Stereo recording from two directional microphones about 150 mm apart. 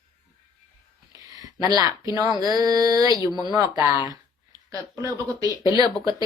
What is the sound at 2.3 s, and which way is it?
A woman's voice, 25° right (ahead or behind).